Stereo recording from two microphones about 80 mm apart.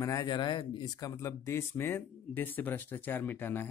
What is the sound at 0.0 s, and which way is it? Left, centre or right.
Speech, left.